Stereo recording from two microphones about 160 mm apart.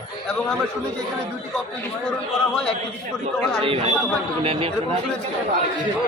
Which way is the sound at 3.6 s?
35° right (ahead or behind).